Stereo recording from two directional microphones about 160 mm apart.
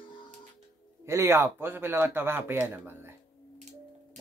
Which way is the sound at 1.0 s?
15° right (ahead or behind).